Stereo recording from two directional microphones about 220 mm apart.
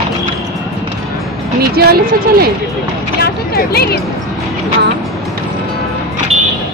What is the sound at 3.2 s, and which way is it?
Speech, 45° left (ahead or behind).